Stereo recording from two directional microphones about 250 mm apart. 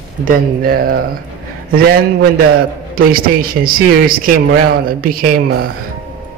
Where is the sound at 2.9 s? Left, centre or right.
Right.